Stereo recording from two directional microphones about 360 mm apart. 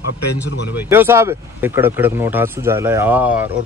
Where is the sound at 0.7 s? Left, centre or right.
Centre.